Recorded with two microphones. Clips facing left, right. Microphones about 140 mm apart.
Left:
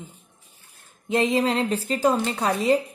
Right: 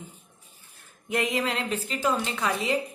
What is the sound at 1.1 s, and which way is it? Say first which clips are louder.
A woman's voice: left 6 dB; 30° left (ahead or behind).